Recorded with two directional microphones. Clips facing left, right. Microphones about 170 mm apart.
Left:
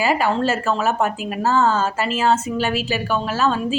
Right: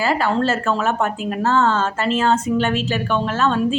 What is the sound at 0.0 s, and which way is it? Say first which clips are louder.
Speech: even; 10° left (ahead or behind).